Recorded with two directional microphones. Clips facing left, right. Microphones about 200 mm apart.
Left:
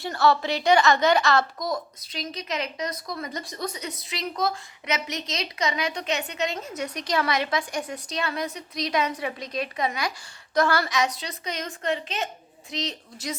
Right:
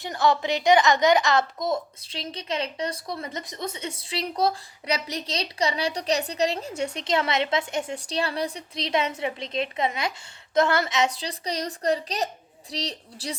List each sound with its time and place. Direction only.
0.0 s a woman's voice: 15° right (ahead or behind); by 13.3 s 35° right (ahead or behind)